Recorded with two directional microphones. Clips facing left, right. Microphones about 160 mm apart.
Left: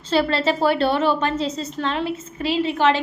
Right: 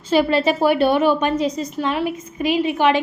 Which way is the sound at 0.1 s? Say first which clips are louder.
Right 3 dB; 15° right (ahead or behind).